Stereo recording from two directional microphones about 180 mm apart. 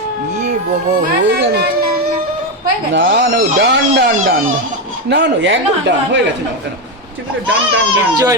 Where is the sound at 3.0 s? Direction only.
60° right (ahead or behind).